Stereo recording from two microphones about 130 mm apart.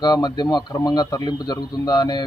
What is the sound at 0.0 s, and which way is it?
Speech, 30° left (ahead or behind).